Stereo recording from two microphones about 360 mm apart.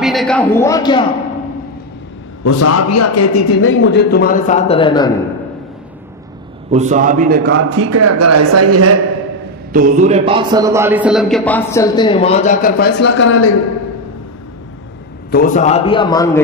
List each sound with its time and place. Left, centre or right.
0.0 s a man's voice: centre
2.4 s a man's voice: left; by 5.1 s centre
6.7 s a man's voice: centre; by 8.9 s right
9.7 s a man's voice: right; by 13.6 s left
15.3 s a man's voice: left